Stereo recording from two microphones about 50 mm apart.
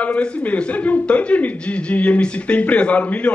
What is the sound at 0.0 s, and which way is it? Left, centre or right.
Speech, left.